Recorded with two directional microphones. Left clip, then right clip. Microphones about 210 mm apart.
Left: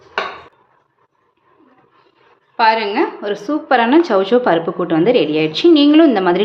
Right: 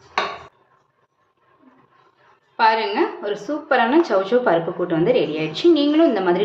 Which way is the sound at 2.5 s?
25° left (ahead or behind).